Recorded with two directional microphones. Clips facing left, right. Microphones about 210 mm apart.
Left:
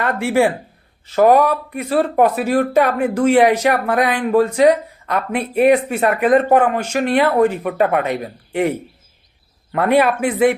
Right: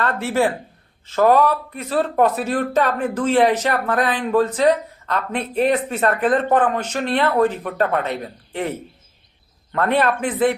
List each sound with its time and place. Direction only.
0.0 s speech: 15° left (ahead or behind)
9.7 s speech: 10° left (ahead or behind)